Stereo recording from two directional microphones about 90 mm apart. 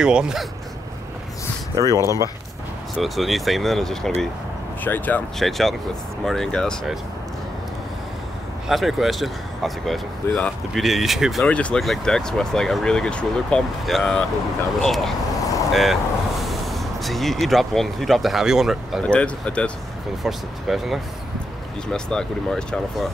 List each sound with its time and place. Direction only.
0.0 s speech: 10° right (ahead or behind)
1.8 s speech: 35° right (ahead or behind)
3.0 s speech: centre (ahead or behind)
4.8 s speech: 20° left (ahead or behind)
5.4 s speech: centre (ahead or behind)
8.6 s speech: centre (ahead or behind)
10.2 s speech: 25° left (ahead or behind)
10.7 s speech: centre (ahead or behind)
11.4 s speech: 15° left (ahead or behind); by 18.9 s 5° right (ahead or behind)
19.0 s speech: 15° left (ahead or behind)
20.2 s speech: 5° right (ahead or behind)
21.9 s speech: 10° left (ahead or behind)